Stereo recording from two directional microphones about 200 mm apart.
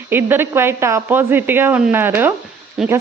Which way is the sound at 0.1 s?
10° right (ahead or behind).